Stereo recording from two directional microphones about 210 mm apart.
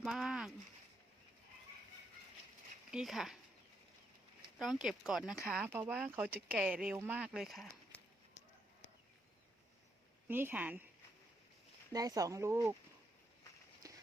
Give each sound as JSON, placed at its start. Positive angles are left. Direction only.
{"t": 0.0, "sound": "speech", "side_deg": 0}
{"t": 2.9, "sound": "speech", "side_deg": 0}
{"t": 4.5, "sound": "speech", "side_deg": 0}
{"t": 10.2, "sound": "speech", "side_deg": -10}
{"t": 11.9, "sound": "speech", "side_deg": -15}
{"t": 13.8, "sound": "run", "side_deg": -15}